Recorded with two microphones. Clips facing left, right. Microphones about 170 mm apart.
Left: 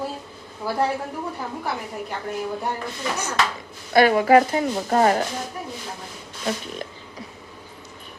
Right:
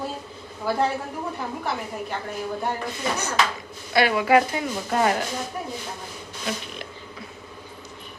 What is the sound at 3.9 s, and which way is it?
Speech, 45° left (ahead or behind).